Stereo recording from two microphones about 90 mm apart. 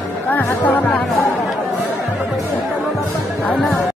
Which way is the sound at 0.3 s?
20° left (ahead or behind).